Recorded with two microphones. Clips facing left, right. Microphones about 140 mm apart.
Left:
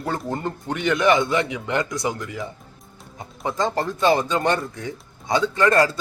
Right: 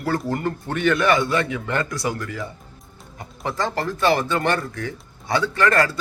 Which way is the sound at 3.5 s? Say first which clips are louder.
Left 1 dB; 20° left (ahead or behind).